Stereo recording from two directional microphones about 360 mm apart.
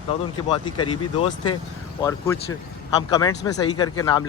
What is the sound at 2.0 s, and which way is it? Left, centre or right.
Speech, centre.